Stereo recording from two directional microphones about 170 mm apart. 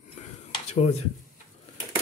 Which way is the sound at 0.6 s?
40° left (ahead or behind).